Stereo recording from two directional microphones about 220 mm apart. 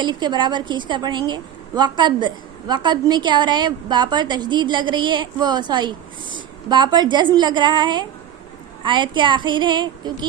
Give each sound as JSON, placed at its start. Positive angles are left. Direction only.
{"t": 0.0, "sound": "a woman's voice", "side_deg": -20}